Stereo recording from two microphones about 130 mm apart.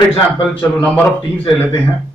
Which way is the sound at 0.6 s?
10° left (ahead or behind).